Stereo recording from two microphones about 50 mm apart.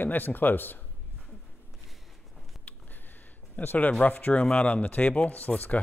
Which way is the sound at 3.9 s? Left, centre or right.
Left.